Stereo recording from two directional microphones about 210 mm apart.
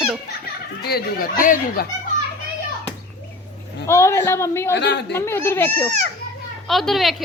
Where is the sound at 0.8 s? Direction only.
45° left (ahead or behind).